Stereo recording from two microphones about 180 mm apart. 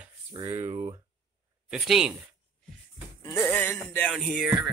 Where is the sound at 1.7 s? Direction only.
Centre (ahead or behind).